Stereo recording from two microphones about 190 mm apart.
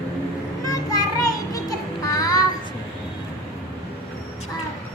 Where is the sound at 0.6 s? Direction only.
15° left (ahead or behind).